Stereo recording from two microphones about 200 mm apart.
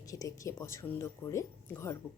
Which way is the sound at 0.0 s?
15° left (ahead or behind).